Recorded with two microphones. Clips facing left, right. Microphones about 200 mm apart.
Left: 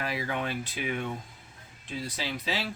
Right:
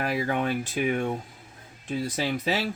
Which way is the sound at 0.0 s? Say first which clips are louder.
Right 6 dB; 50° right (ahead or behind).